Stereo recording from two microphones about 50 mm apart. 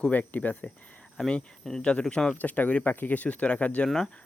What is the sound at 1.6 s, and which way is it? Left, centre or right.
Speech, centre.